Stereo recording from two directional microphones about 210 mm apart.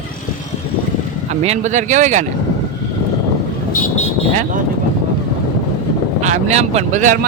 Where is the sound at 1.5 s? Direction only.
35° right (ahead or behind).